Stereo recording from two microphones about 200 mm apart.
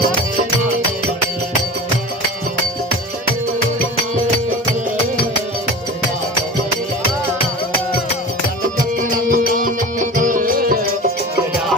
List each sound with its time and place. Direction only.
9.0 s music: 40° right (ahead or behind)